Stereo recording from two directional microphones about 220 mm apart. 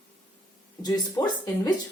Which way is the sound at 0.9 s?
15° left (ahead or behind).